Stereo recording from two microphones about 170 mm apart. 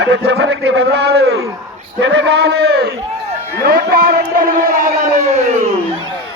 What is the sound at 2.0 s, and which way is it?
Speech, 90° right.